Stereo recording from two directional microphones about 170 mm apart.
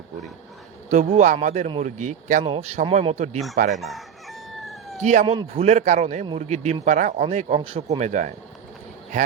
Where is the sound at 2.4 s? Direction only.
35° right (ahead or behind).